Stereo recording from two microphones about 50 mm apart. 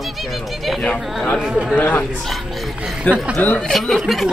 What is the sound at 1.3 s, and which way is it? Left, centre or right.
Speech, centre.